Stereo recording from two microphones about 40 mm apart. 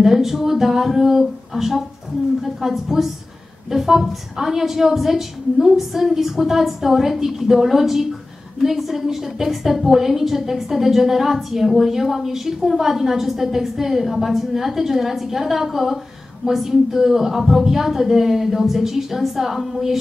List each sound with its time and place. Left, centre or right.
0.0 s a woman's voice: centre